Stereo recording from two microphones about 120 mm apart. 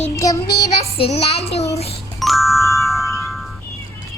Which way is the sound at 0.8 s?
60° left (ahead or behind).